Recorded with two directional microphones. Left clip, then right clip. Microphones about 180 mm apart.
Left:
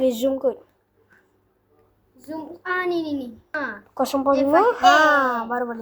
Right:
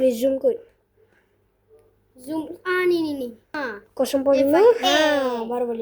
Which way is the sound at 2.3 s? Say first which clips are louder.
Right 2 dB; 35° right (ahead or behind).